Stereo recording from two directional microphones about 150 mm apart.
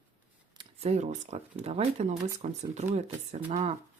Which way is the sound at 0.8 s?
50° right (ahead or behind).